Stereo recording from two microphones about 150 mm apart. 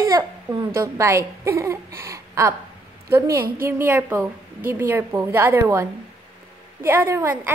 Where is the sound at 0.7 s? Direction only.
20° right (ahead or behind).